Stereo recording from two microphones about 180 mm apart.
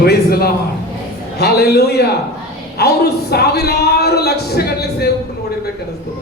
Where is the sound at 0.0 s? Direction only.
60° left (ahead or behind).